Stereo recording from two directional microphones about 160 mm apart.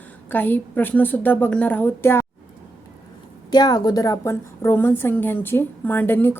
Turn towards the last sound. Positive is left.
turn(degrees=15)  # may be behind; listen again after turning